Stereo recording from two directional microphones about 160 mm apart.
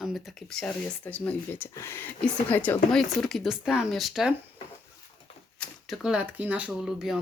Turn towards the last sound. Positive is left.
turn(degrees=-5)  # may be behind; listen again after turning